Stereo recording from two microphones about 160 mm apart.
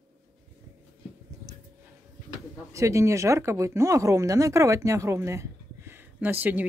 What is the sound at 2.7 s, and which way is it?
Speech, 20° right (ahead or behind).